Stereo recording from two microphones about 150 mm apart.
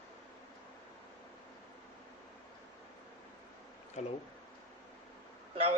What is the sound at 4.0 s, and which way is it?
Speech, 50° left (ahead or behind).